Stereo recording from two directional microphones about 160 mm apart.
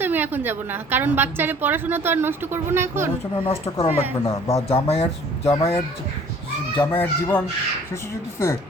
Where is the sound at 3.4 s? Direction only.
40° left (ahead or behind).